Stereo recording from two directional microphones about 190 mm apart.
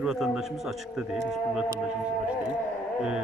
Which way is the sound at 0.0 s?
5° right (ahead or behind).